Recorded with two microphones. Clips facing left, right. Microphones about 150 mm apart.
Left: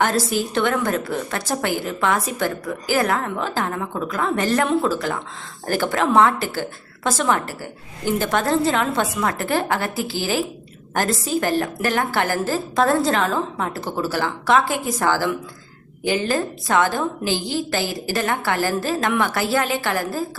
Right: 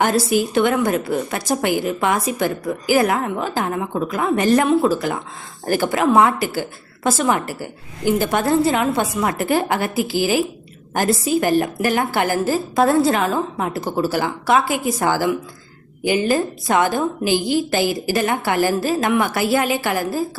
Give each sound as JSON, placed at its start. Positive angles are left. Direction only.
{"t": 0.0, "sound": "a woman's voice", "side_deg": -10}